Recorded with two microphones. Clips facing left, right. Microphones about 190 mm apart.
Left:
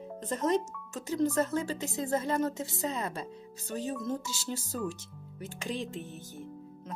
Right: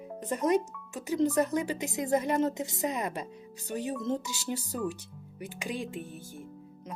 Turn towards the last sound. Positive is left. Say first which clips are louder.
# right 1 dB
turn(degrees=-10)  # may be behind; listen again after turning